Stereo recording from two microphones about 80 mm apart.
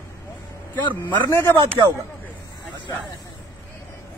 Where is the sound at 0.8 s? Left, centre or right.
Left.